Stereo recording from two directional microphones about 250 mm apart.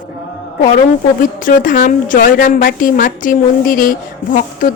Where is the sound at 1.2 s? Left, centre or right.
Left.